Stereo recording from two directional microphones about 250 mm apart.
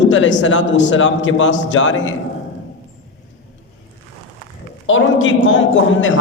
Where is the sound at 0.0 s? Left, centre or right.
Left.